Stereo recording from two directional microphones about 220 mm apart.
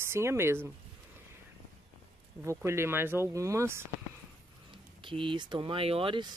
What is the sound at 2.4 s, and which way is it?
Speech, 10° right (ahead or behind).